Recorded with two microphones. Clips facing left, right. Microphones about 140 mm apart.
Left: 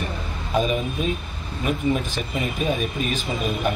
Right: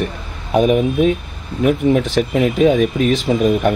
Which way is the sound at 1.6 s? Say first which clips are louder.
Right 9 dB; 80° right.